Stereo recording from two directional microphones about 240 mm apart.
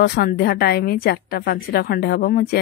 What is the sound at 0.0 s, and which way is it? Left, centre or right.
Speech, left.